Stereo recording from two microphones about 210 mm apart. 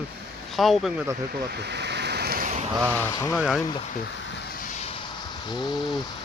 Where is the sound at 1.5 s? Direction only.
50° right (ahead or behind).